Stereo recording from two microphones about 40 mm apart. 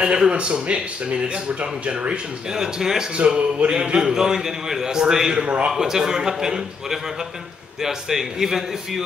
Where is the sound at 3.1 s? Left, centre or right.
Right.